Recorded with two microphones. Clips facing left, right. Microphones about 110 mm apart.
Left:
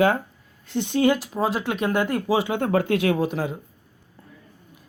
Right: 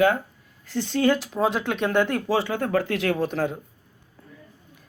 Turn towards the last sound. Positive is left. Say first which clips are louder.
# even
turn(degrees=5)  # may be behind; listen again after turning